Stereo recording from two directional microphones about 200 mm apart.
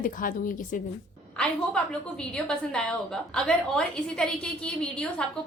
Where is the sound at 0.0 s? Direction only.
40° left (ahead or behind).